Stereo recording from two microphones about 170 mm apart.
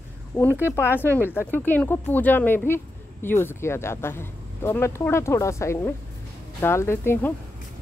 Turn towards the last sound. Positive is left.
turn(degrees=15)  # may be behind; listen again after turning